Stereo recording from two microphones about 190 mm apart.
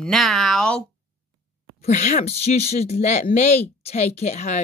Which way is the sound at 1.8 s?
40° left (ahead or behind).